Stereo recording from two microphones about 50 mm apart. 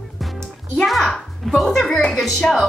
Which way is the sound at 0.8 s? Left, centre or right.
Centre.